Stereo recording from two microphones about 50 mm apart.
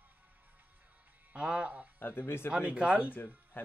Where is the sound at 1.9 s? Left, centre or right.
Left.